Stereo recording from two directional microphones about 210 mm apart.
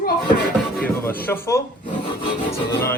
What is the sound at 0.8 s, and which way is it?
Speech, 10° left (ahead or behind).